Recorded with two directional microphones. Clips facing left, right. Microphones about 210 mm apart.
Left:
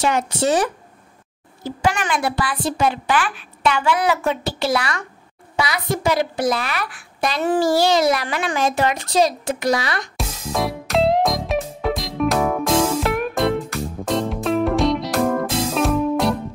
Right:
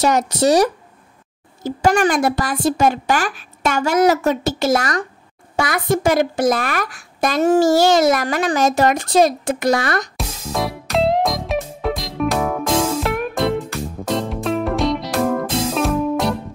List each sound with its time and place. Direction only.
0.0 s a woman's voice: 40° right (ahead or behind)
10.1 s music: centre (ahead or behind)